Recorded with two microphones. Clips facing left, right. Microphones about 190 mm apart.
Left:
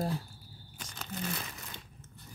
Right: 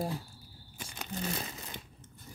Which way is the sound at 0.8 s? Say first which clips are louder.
Right 2 dB; 10° right (ahead or behind).